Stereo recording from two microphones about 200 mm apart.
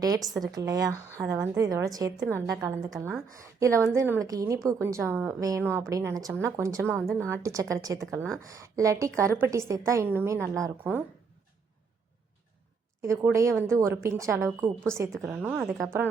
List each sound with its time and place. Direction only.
0.5 s a woman's voice: 20° right (ahead or behind)
13.0 s a woman's voice: 15° right (ahead or behind)